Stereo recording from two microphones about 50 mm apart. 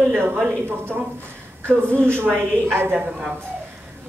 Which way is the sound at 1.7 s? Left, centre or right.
Right.